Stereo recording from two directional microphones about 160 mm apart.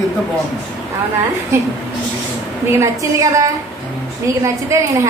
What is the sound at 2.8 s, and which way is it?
Speech, 20° right (ahead or behind).